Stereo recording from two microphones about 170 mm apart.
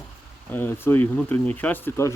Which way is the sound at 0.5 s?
10° left (ahead or behind).